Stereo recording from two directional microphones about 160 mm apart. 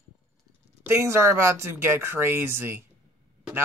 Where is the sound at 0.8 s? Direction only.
15° right (ahead or behind).